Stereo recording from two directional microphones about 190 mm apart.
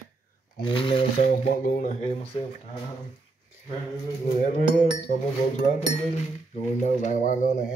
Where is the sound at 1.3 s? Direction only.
50° left (ahead or behind).